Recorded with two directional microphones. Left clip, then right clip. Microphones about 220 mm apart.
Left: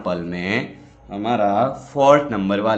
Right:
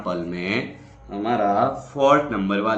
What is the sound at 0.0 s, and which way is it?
Speech, 40° left (ahead or behind).